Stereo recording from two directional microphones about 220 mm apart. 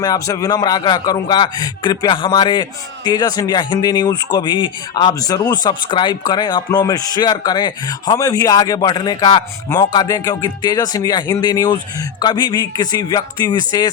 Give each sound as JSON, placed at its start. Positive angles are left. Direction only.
{"t": 0.0, "sound": "speech", "side_deg": 15}